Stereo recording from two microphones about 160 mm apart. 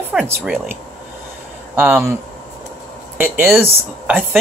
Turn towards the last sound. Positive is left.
turn(degrees=-15)  # may be behind; listen again after turning